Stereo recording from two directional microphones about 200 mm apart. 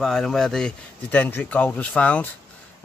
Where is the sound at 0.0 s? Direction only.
Centre (ahead or behind).